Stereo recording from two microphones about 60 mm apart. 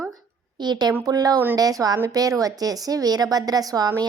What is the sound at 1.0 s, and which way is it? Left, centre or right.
Speech, right.